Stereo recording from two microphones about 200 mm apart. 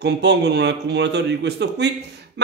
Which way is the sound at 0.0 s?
60° right (ahead or behind).